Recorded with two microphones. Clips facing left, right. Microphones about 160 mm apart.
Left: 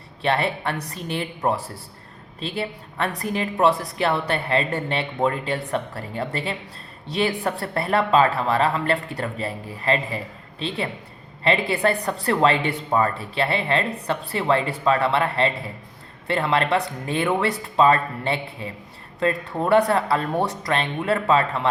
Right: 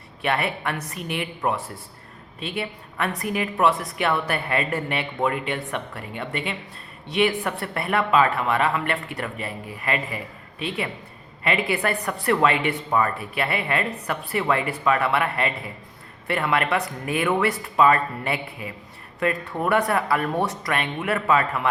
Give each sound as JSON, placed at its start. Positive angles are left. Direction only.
{"t": 0.2, "sound": "speech", "side_deg": 30}